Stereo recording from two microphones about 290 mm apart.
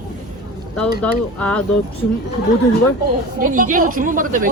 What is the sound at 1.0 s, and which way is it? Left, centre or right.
Speech, centre.